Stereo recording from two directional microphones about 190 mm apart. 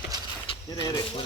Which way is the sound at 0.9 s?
20° left (ahead or behind).